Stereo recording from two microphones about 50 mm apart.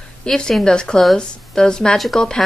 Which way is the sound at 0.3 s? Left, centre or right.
Centre.